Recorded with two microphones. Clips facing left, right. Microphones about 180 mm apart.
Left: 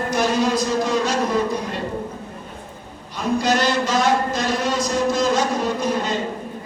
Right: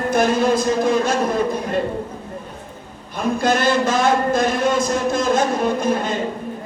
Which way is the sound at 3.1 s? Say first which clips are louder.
Right 1 dB; 50° right (ahead or behind).